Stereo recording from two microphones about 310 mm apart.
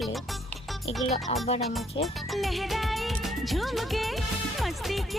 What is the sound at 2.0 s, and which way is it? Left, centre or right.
Music, centre.